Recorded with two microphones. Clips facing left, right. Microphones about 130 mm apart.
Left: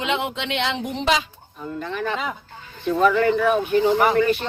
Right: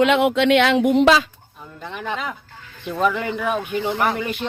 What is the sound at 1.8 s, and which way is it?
Speech, 15° right (ahead or behind).